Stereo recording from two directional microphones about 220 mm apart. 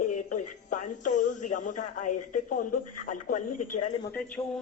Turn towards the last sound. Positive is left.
turn(degrees=5)  # may be behind; listen again after turning